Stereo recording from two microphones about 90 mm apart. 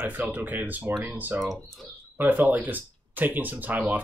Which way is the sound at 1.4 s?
Centre (ahead or behind).